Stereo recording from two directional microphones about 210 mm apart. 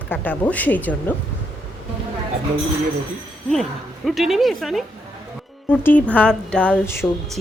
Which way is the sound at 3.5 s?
Centre (ahead or behind).